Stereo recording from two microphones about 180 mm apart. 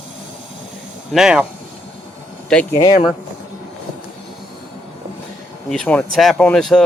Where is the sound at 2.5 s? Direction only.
5° left (ahead or behind).